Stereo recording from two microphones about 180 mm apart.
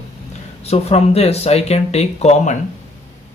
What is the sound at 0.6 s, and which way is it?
Speech, 35° left (ahead or behind).